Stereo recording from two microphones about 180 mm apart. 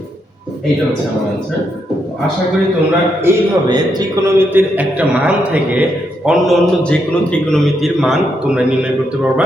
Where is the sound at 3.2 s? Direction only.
20° right (ahead or behind).